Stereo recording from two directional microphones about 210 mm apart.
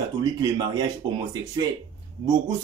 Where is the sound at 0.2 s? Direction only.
20° right (ahead or behind).